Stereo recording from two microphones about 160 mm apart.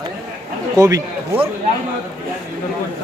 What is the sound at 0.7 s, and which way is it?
Speech, 20° right (ahead or behind).